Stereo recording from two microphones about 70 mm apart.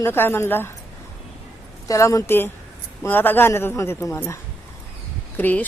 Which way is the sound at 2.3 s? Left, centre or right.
Left.